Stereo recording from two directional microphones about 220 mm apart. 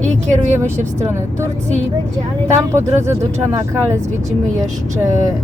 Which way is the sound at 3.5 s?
10° right (ahead or behind).